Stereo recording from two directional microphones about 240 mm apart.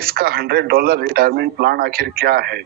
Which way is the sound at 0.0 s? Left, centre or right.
Right.